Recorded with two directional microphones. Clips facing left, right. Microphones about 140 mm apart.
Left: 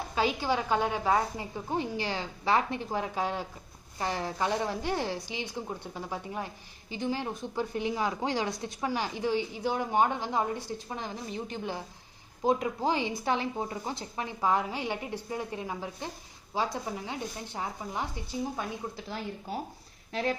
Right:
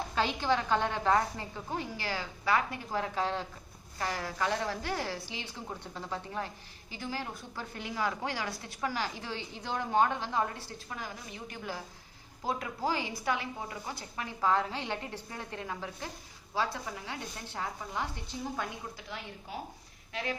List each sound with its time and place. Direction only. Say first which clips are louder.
0.1 s a woman's voice: left 2 dB; 10° left (ahead or behind)
18.9 s speech: left 6 dB; 35° left (ahead or behind)